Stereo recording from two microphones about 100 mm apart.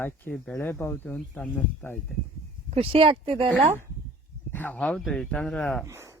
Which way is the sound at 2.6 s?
80° right.